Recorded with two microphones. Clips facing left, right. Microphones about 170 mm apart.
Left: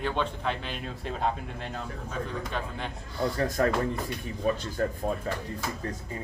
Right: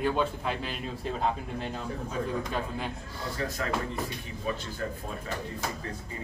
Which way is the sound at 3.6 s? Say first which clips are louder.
Left 9 dB; 45° left (ahead or behind).